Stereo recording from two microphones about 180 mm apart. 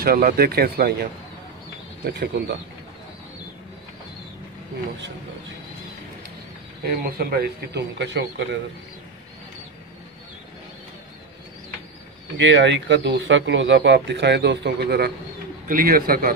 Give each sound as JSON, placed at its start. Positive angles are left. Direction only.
{"t": 0.0, "sound": "a man's voice", "side_deg": -60}
{"t": 2.0, "sound": "speech", "side_deg": -70}
{"t": 6.8, "sound": "a man's voice", "side_deg": -55}
{"t": 12.4, "sound": "a man's voice", "side_deg": -80}